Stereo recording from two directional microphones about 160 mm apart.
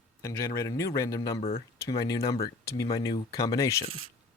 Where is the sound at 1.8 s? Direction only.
20° left (ahead or behind).